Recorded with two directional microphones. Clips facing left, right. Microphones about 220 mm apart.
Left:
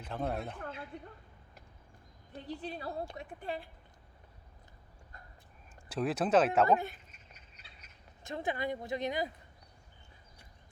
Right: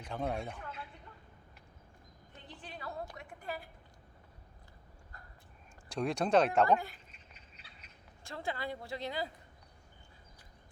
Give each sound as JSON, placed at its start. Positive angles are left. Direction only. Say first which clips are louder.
{"t": 0.0, "sound": "speech", "louder": "left 1 dB", "side_deg": 0}
{"t": 2.3, "sound": "a woman's voice", "louder": "left 10 dB", "side_deg": 35}
{"t": 5.9, "sound": "speech", "louder": "left 1 dB", "side_deg": 5}
{"t": 6.7, "sound": "a woman's voice", "louder": "left 1 dB", "side_deg": 20}
{"t": 8.2, "sound": "a woman's voice", "louder": "left 4 dB", "side_deg": 20}